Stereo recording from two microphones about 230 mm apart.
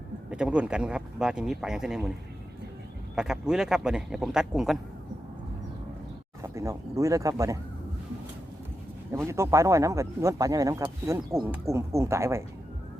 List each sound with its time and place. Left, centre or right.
0.3 s speech: centre
3.2 s speech: centre
6.5 s speech: centre
9.2 s speech: centre